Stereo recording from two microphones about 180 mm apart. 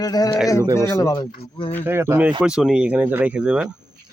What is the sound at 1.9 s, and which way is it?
Speech, 15° right (ahead or behind).